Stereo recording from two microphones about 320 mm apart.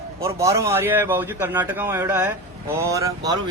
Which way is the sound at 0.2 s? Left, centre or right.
Centre.